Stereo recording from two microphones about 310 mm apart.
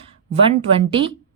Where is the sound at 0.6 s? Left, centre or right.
Centre.